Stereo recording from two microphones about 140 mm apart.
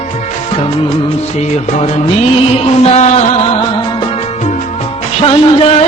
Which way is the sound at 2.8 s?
55° left (ahead or behind).